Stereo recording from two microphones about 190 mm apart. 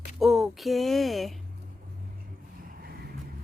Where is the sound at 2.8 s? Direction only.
55° right (ahead or behind).